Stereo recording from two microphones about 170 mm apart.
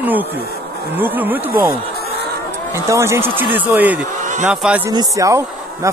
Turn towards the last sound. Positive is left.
turn(degrees=-20)  # may be behind; listen again after turning